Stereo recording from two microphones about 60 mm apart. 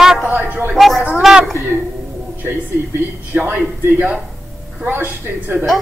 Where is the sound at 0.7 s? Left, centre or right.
Centre.